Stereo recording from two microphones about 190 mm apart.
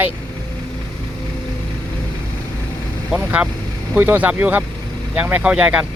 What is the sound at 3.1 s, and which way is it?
Speech, 5° right (ahead or behind).